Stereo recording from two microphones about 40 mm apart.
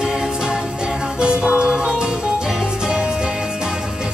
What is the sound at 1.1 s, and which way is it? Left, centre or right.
Music, right.